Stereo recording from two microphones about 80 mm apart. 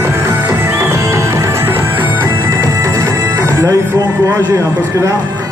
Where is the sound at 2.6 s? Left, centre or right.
Right.